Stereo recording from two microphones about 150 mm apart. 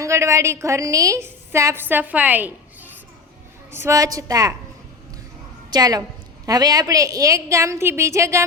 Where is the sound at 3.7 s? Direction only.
15° right (ahead or behind).